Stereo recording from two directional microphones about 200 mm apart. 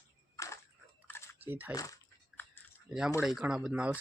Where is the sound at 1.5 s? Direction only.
10° right (ahead or behind).